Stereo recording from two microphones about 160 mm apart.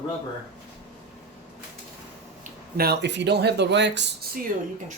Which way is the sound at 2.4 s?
75° right (ahead or behind).